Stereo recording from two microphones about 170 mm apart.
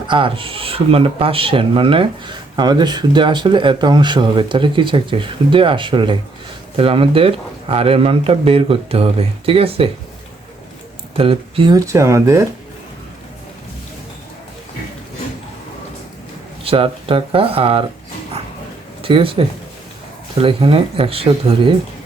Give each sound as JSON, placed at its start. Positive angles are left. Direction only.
{"t": 0.1, "sound": "speech", "side_deg": -30}
{"t": 11.2, "sound": "speech", "side_deg": -30}
{"t": 16.6, "sound": "speech", "side_deg": -35}
{"t": 19.0, "sound": "speech", "side_deg": -30}